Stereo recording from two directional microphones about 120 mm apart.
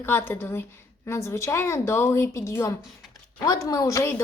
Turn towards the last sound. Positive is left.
turn(degrees=25)  # may be behind; listen again after turning